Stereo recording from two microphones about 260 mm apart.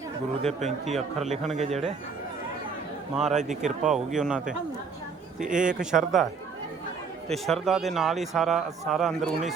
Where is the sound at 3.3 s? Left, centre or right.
Right.